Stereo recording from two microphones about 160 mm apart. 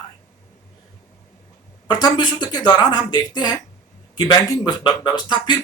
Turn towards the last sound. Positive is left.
turn(degrees=30)  # may be behind; listen again after turning